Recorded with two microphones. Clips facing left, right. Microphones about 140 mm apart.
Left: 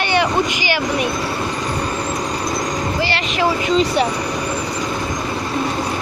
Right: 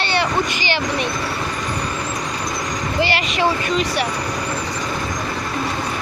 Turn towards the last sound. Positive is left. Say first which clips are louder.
# left 4 dB
turn(degrees=25)  # may be behind; listen again after turning